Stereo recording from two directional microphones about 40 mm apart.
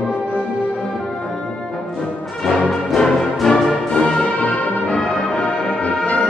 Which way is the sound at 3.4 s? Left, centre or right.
Centre.